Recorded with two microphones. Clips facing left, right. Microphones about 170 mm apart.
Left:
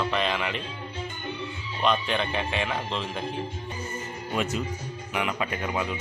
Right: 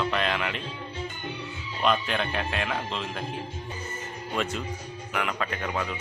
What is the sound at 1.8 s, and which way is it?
Speech, centre (ahead or behind).